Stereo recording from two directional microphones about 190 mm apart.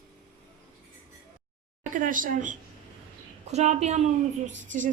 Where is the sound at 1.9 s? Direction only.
45° right (ahead or behind).